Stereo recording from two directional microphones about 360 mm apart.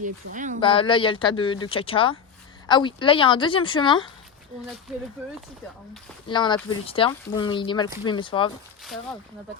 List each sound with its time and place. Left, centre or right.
0.0 s speech: right
0.6 s speech: centre
6.2 s speech: centre